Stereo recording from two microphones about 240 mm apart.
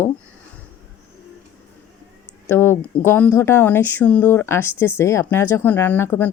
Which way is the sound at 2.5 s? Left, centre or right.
Centre.